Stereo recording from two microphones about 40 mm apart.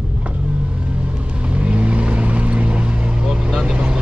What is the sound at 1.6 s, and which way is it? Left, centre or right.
Vehicle, right.